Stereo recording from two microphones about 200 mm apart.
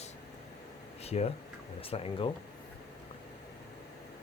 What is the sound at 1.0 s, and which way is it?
Speech, 30° left (ahead or behind).